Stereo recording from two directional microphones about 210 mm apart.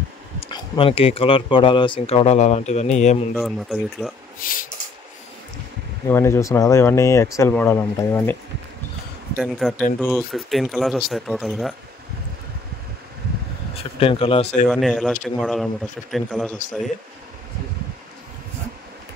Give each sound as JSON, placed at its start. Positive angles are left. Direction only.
{"t": 0.4, "sound": "speech", "side_deg": 25}
{"t": 3.3, "sound": "speech", "side_deg": 0}
{"t": 4.4, "sound": "a sound", "side_deg": 40}
{"t": 6.0, "sound": "speech", "side_deg": 10}
{"t": 9.4, "sound": "speech", "side_deg": 0}
{"t": 13.7, "sound": "speech", "side_deg": 25}
{"t": 14.7, "sound": "speech", "side_deg": 0}